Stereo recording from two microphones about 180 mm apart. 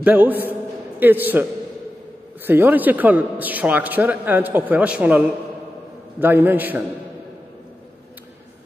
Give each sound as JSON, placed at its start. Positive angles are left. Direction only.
{"t": 0.0, "sound": "a man's voice", "side_deg": -10}